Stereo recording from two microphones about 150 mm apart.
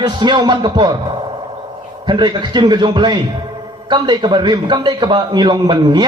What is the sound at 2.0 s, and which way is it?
A man's voice, 30° right (ahead or behind).